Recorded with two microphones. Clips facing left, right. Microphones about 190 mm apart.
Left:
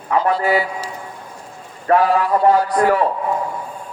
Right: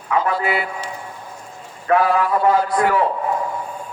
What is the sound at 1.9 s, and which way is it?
Speech, 35° left (ahead or behind).